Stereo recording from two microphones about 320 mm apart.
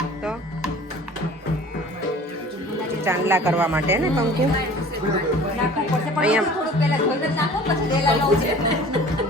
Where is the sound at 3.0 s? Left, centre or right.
Centre.